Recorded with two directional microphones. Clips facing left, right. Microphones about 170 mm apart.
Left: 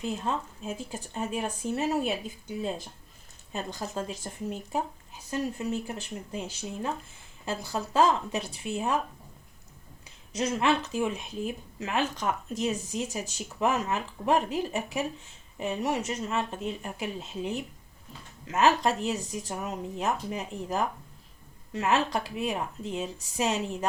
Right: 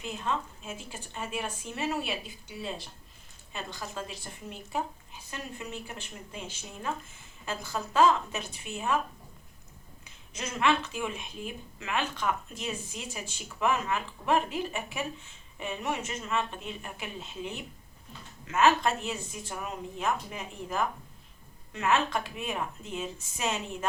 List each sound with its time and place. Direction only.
0.0 s speech: 35° left (ahead or behind)
10.3 s speech: 35° left (ahead or behind)